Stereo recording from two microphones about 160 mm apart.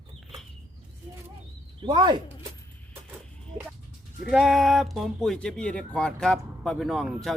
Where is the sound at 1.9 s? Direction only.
30° right (ahead or behind).